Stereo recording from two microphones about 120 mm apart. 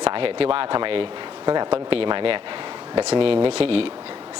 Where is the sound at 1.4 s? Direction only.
35° right (ahead or behind).